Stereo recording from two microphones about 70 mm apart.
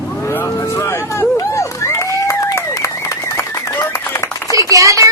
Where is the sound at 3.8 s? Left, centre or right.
Left.